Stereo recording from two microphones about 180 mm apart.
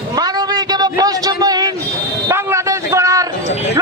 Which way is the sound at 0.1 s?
20° right (ahead or behind).